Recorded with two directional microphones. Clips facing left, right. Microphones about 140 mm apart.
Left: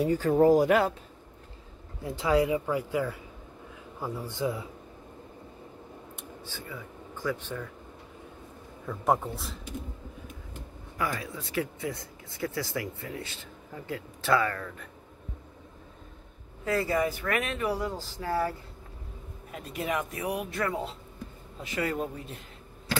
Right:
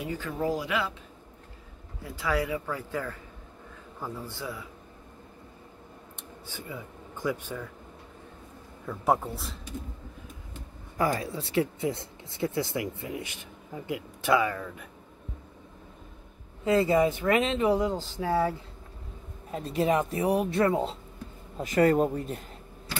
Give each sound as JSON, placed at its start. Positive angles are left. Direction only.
{"t": 0.0, "sound": "speech", "side_deg": 40}
{"t": 2.0, "sound": "speech", "side_deg": 25}
{"t": 6.4, "sound": "speech", "side_deg": -15}
{"t": 8.8, "sound": "a man's voice", "side_deg": 0}
{"t": 11.0, "sound": "speech", "side_deg": -35}
{"t": 16.6, "sound": "speech", "side_deg": -20}
{"t": 21.5, "sound": "speech", "side_deg": -45}